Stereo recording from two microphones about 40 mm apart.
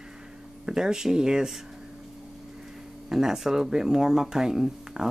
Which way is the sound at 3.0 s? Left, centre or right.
Centre.